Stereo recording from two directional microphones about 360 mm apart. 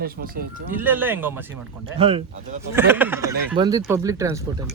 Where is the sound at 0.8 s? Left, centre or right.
Centre.